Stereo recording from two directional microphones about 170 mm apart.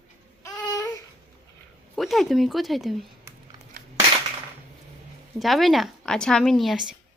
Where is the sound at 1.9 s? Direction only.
Centre (ahead or behind).